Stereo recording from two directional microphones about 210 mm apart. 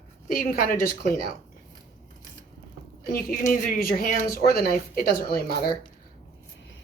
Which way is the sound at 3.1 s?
40° left (ahead or behind).